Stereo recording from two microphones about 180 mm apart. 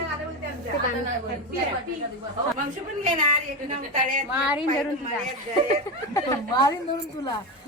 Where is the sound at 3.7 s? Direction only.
45° right (ahead or behind).